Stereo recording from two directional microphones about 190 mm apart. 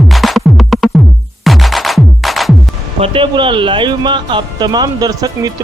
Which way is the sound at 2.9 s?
30° right (ahead or behind).